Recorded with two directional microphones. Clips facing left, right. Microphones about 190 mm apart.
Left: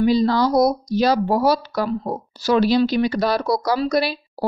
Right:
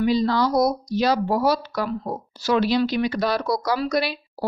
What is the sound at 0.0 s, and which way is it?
Speech, 35° left (ahead or behind).